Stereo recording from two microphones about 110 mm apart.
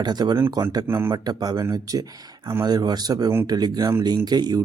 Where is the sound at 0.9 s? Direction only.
25° right (ahead or behind).